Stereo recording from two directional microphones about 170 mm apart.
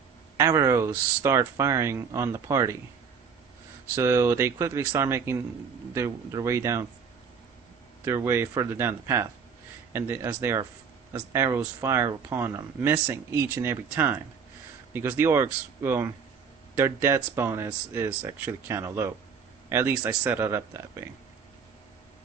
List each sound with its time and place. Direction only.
0.3 s speech: 15° right (ahead or behind)
3.9 s speech: 15° right (ahead or behind)
8.0 s speech: 15° right (ahead or behind)